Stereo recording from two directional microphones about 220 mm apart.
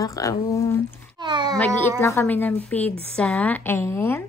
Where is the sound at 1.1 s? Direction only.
20° right (ahead or behind).